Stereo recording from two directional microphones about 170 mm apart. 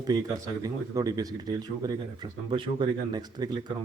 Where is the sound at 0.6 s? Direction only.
20° right (ahead or behind).